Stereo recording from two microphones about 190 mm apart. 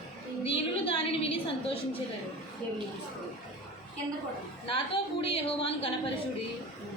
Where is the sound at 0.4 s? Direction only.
30° left (ahead or behind).